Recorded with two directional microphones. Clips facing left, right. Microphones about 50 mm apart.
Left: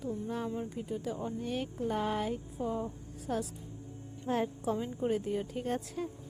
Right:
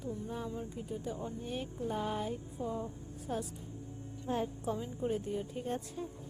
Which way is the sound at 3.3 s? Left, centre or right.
Left.